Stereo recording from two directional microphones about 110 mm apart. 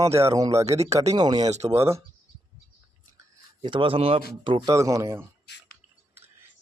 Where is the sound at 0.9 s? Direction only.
80° right.